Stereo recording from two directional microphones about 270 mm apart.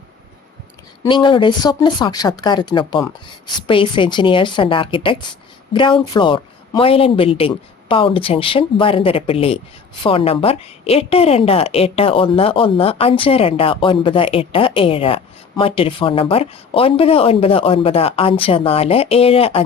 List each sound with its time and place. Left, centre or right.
1.0 s a woman's voice: centre